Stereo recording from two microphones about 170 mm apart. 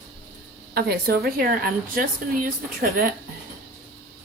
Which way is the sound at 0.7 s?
65° right (ahead or behind).